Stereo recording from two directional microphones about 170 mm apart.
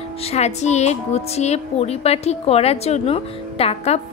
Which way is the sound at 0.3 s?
40° left (ahead or behind).